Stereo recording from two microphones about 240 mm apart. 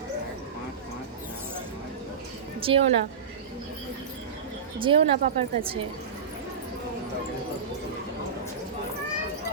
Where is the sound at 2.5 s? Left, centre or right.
Right.